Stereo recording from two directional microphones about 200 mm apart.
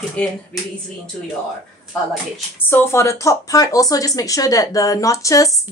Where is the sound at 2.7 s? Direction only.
10° left (ahead or behind).